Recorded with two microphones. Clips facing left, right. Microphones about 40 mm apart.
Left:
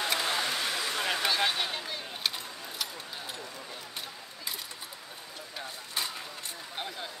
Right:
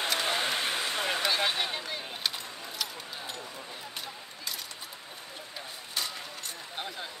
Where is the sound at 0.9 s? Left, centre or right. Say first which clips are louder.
Even; centre.